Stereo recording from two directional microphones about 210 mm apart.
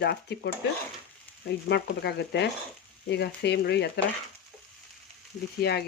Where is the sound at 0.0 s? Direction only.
50° left (ahead or behind).